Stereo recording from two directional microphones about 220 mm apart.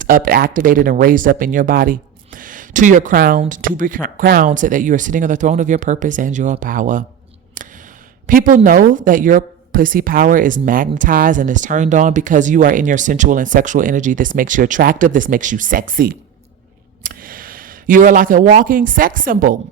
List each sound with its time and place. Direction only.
0.0 s speech: 40° right (ahead or behind)
8.3 s speech: 40° right (ahead or behind)